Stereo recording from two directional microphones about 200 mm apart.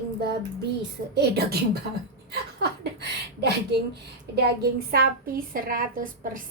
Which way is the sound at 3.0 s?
55° right (ahead or behind).